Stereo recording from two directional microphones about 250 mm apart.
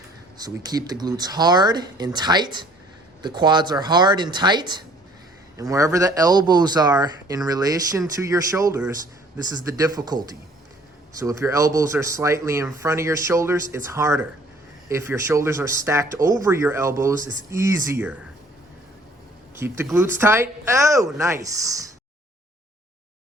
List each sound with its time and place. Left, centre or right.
0.3 s speech: centre
19.5 s speech: centre